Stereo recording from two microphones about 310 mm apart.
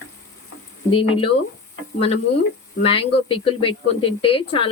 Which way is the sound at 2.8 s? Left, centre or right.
Centre.